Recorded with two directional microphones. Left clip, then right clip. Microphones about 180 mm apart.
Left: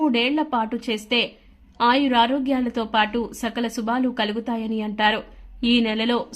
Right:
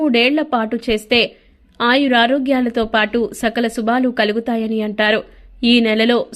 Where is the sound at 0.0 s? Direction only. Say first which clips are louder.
Right 6 dB; 20° right (ahead or behind).